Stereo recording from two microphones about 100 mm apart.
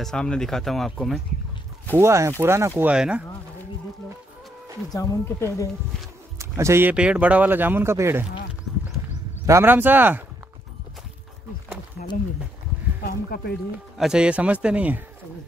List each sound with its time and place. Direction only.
0.0 s speech: 10° left (ahead or behind)
1.9 s speech: 25° right (ahead or behind)
2.8 s a man's voice: 10° right (ahead or behind)
4.8 s speech: 35° left (ahead or behind)
6.3 s a sound: 30° right (ahead or behind)
6.9 s speech: 10° right (ahead or behind)
9.5 s speech: 25° right (ahead or behind)
13.9 s a man's voice: 5° right (ahead or behind)